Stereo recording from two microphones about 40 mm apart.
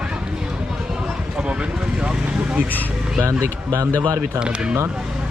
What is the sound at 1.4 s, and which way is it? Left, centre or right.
Vehicle, right.